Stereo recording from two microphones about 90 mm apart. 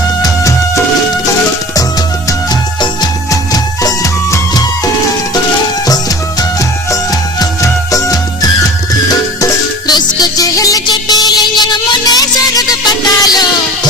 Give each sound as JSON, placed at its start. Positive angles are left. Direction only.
{"t": 3.5, "sound": "music", "side_deg": 40}
{"t": 6.9, "sound": "music of bollywood", "side_deg": 40}
{"t": 9.4, "sound": "music", "side_deg": 45}